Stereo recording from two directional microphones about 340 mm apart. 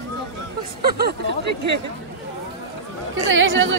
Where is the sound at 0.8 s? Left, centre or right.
Right.